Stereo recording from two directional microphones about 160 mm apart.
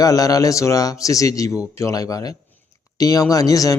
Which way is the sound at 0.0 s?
20° left (ahead or behind).